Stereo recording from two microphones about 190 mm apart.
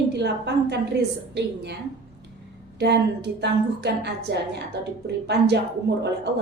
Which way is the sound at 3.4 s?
65° right (ahead or behind).